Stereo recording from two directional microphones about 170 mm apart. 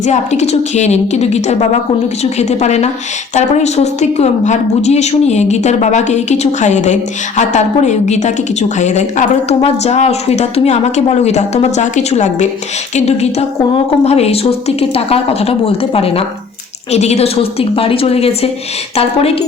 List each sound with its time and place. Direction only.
0.0 s a woman's voice: 40° left (ahead or behind)